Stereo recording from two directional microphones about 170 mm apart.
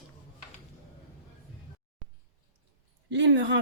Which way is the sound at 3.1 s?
90° right.